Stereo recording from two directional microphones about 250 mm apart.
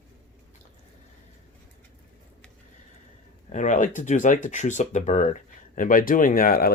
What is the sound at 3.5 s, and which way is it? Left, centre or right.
Speech, left.